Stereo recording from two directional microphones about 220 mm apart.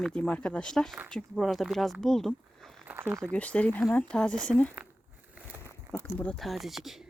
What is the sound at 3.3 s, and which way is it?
Speech, 5° left (ahead or behind).